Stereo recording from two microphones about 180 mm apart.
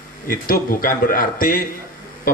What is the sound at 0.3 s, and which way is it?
Speech, 55° left (ahead or behind).